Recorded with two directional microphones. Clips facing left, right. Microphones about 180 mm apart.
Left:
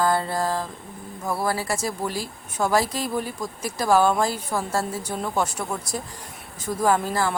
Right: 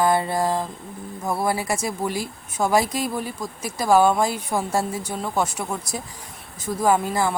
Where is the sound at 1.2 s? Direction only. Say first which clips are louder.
Right 2 dB; 15° right (ahead or behind).